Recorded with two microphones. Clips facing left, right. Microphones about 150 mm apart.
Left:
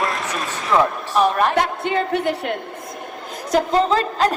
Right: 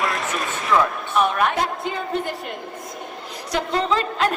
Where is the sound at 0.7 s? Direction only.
30° left (ahead or behind).